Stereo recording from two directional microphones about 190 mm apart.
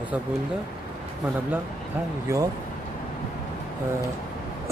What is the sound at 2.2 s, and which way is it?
Speech, 15° right (ahead or behind).